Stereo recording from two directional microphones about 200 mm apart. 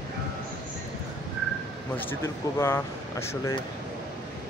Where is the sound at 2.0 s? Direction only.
10° left (ahead or behind).